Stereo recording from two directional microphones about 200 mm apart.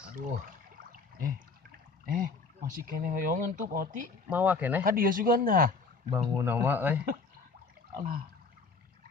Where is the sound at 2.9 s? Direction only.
45° right (ahead or behind).